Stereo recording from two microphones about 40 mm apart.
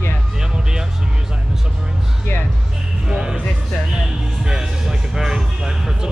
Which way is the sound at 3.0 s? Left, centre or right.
Centre.